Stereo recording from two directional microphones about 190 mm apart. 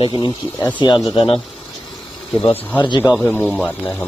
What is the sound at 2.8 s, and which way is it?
Speech, 20° left (ahead or behind).